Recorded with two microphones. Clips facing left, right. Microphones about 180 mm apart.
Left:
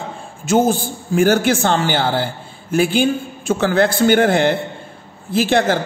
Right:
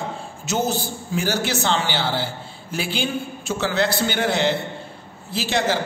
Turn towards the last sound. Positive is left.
turn(degrees=55)  # may be behind; listen again after turning